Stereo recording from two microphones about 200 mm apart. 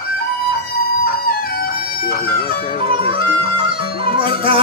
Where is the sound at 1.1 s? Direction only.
50° left (ahead or behind).